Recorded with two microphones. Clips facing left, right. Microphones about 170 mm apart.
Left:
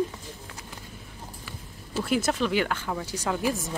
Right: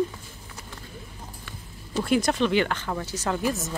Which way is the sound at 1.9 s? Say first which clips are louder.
Right 3 dB; 5° left (ahead or behind).